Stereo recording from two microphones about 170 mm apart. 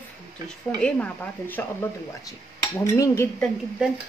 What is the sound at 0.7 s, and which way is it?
Speech, 5° left (ahead or behind).